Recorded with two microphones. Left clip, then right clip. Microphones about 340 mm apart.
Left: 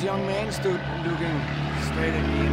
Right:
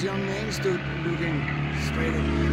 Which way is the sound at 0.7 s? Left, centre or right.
Left.